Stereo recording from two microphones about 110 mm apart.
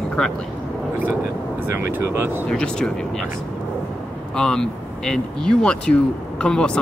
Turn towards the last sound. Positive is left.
turn(degrees=10)  # may be behind; listen again after turning